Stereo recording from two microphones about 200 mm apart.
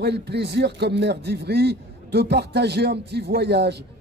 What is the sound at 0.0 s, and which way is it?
A man's voice, 55° right (ahead or behind).